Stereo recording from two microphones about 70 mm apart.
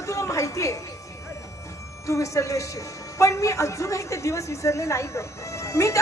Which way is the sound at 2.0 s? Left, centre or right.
Left.